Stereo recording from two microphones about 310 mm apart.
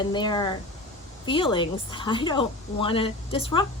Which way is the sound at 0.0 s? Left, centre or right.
Centre.